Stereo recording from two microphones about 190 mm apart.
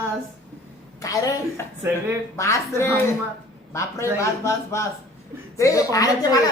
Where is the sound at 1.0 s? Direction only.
15° left (ahead or behind).